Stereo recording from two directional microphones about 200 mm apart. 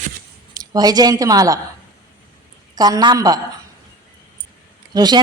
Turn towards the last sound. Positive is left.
turn(degrees=-20)  # may be behind; listen again after turning